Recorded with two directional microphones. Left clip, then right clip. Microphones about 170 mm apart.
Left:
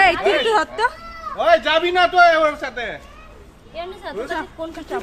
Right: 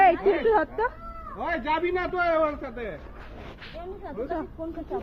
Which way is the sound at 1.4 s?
40° left (ahead or behind).